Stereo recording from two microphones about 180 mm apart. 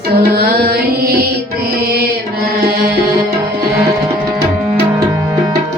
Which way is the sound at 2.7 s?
65° right (ahead or behind).